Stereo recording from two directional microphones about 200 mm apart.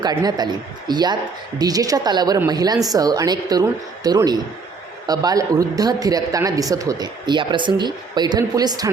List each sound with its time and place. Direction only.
0.0 s a man's voice: 20° right (ahead or behind)